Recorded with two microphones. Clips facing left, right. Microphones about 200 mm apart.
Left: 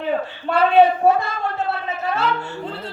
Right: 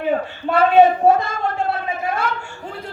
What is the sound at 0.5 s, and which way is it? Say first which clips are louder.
Speech: right 2 dB; 45° right (ahead or behind).